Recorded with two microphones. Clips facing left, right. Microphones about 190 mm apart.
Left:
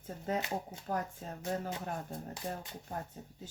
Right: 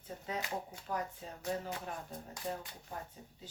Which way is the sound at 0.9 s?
45° left (ahead or behind).